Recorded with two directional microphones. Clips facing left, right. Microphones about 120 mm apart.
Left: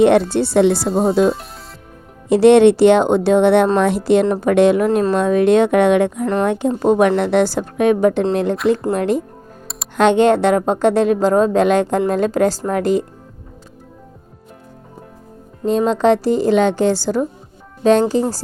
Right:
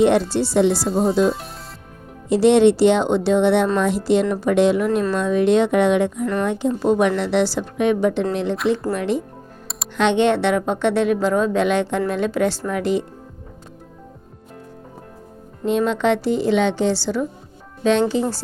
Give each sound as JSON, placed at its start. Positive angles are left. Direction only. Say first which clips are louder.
{"t": 0.0, "sound": "a woman's voice", "louder": "left 4 dB", "side_deg": 60}
{"t": 15.6, "sound": "a woman's voice", "louder": "left 4 dB", "side_deg": 35}